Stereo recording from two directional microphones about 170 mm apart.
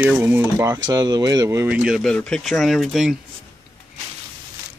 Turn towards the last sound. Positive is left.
turn(degrees=0)  # may be behind; listen again after turning